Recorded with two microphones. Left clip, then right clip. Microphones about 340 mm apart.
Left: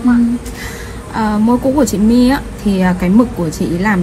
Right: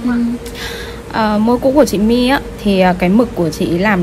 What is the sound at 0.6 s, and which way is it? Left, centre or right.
A woman's voice, right.